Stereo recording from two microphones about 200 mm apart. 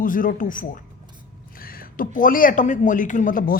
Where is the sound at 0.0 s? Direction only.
40° left (ahead or behind).